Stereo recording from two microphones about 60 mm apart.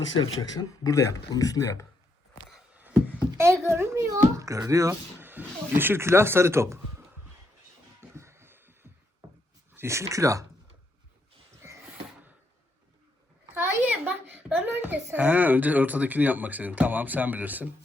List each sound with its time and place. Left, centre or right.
0.5 s speech: left
2.7 s a sound: right
3.3 s speech: right
4.1 s speech: right
5.2 s speech: right
8.1 s a sound: right
9.7 s speech: right
13.5 s a sound: right
13.9 s a child's voice: right